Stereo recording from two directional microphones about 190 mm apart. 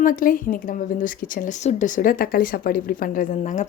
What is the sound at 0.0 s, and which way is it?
Speech, 45° left (ahead or behind).